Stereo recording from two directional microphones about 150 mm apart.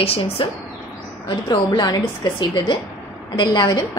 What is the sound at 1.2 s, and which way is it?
A woman's voice, 30° left (ahead or behind).